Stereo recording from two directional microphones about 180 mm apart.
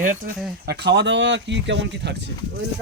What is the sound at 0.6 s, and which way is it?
Speech, 65° right (ahead or behind).